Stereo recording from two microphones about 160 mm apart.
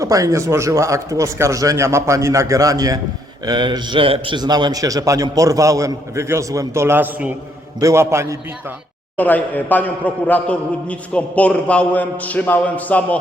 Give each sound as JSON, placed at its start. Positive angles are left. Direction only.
{"t": 0.0, "sound": "a man's voice", "side_deg": -20}
{"t": 9.1, "sound": "a man's voice", "side_deg": 10}